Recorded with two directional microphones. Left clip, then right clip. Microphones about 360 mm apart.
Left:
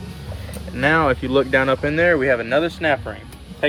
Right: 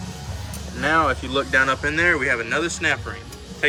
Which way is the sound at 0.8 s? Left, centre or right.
Centre.